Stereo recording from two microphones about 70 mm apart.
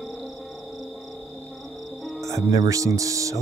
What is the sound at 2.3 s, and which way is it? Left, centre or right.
Speech, right.